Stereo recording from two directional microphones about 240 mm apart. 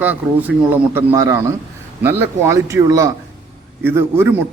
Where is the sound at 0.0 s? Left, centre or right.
Centre.